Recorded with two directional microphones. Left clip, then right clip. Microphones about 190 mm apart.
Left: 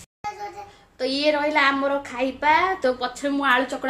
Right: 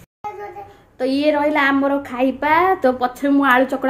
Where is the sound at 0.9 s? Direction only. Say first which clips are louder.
Right 4 dB; 10° right (ahead or behind).